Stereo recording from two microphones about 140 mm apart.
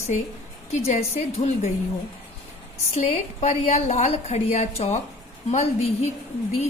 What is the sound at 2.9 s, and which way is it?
Speech, 55° left (ahead or behind).